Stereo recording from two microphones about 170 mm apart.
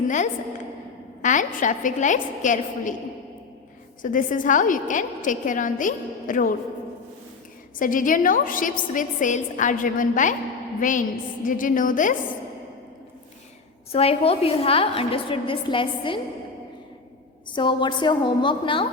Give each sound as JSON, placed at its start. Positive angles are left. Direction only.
{"t": 1.2, "sound": "a woman's voice", "side_deg": 50}
{"t": 4.0, "sound": "a woman's voice", "side_deg": 50}
{"t": 7.8, "sound": "a woman's voice", "side_deg": 50}
{"t": 13.9, "sound": "a woman's voice", "side_deg": 35}
{"t": 17.5, "sound": "a woman's voice", "side_deg": 30}